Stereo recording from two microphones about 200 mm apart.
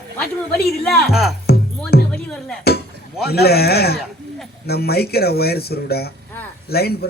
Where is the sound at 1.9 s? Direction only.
50° left (ahead or behind).